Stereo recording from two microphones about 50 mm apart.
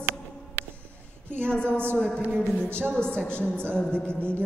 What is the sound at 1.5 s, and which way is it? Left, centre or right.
A woman's voice, left.